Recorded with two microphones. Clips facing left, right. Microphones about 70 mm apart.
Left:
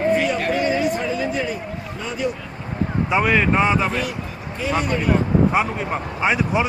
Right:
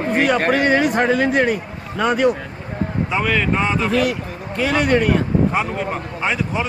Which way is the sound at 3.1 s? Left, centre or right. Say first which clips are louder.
Left 2 dB; centre.